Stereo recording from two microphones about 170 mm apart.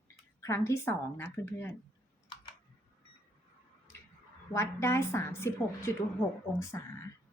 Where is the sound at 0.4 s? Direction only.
15° left (ahead or behind).